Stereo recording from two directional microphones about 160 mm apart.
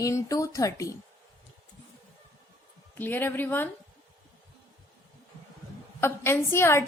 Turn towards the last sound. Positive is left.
turn(degrees=15)  # may be behind; listen again after turning